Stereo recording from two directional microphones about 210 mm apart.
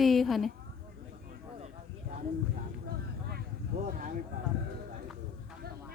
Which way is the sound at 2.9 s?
50° right (ahead or behind).